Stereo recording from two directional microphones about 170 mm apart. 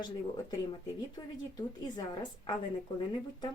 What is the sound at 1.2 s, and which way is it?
Speech, 30° left (ahead or behind).